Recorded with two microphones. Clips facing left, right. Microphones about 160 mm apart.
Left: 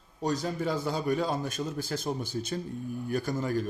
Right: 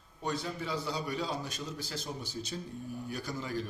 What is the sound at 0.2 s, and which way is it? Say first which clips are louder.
A man's voice: left 6 dB; 40° left (ahead or behind).